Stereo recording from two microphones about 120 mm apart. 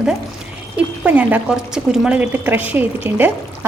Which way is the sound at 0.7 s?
10° right (ahead or behind).